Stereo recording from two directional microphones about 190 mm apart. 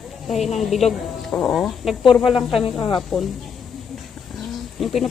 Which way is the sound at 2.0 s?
25° left (ahead or behind).